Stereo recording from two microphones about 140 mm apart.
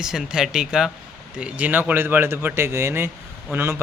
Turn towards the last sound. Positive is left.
turn(degrees=-20)  # may be behind; listen again after turning